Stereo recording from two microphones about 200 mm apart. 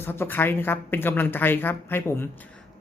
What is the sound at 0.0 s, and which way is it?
Speech, 10° left (ahead or behind).